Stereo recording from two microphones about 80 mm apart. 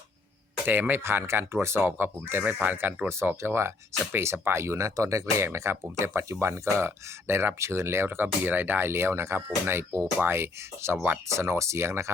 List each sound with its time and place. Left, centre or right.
0.6 s speech: right